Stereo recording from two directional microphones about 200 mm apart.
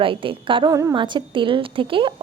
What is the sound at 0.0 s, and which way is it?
A woman's voice, 25° right (ahead or behind).